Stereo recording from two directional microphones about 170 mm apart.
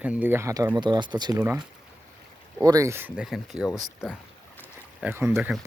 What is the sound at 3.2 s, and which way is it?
Speech, centre (ahead or behind).